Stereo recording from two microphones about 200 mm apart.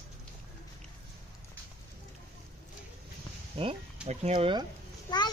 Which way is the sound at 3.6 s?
25° right (ahead or behind).